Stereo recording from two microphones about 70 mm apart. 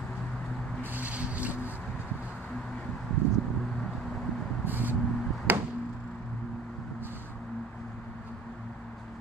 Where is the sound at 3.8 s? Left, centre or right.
Centre.